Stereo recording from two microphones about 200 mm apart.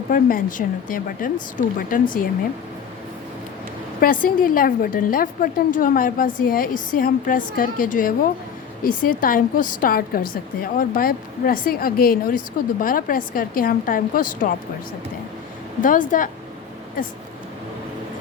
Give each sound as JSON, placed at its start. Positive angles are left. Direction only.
{"t": 0.1, "sound": "a woman's voice", "side_deg": 45}
{"t": 4.0, "sound": "a woman's voice", "side_deg": 45}
{"t": 15.8, "sound": "speech", "side_deg": 40}